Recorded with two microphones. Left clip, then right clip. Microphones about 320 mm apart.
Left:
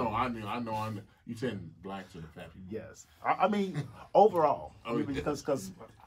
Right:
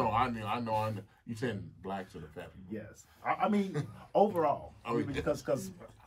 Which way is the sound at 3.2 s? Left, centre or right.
Left.